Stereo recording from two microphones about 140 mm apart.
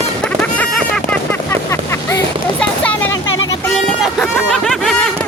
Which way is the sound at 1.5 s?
20° left (ahead or behind).